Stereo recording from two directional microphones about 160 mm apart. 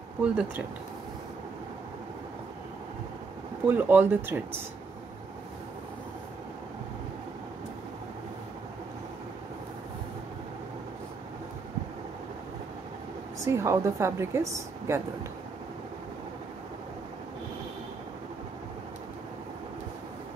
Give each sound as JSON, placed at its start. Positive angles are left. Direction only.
{"t": 0.2, "sound": "a woman's voice", "side_deg": -5}
{"t": 3.6, "sound": "a woman's voice", "side_deg": -10}
{"t": 13.5, "sound": "a woman's voice", "side_deg": -15}